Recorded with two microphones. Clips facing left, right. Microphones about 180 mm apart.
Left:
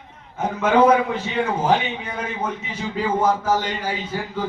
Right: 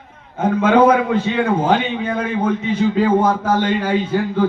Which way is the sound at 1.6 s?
55° right (ahead or behind).